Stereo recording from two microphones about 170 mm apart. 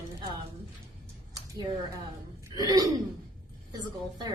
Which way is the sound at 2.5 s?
20° right (ahead or behind).